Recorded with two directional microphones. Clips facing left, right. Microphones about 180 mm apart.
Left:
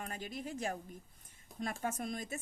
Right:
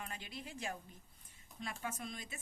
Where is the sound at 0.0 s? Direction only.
45° left (ahead or behind).